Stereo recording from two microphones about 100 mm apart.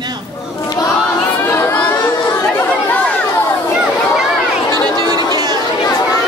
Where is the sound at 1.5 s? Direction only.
20° left (ahead or behind).